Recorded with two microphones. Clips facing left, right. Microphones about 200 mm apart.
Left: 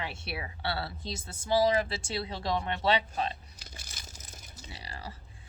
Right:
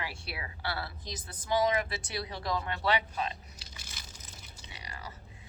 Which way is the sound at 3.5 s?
50° left (ahead or behind).